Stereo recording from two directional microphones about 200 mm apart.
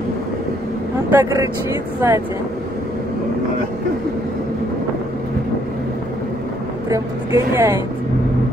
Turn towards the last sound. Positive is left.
turn(degrees=-15)  # may be behind; listen again after turning